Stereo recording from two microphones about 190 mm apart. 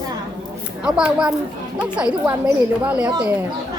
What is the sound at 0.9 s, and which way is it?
Speech, 5° right (ahead or behind).